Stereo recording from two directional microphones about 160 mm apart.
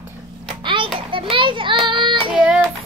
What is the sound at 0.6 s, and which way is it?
Child singing, 30° right (ahead or behind).